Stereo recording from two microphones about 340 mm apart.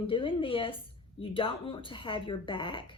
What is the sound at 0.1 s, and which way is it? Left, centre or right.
Speech, centre.